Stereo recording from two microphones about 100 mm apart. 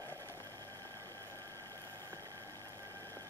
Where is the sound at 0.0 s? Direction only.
30° right (ahead or behind).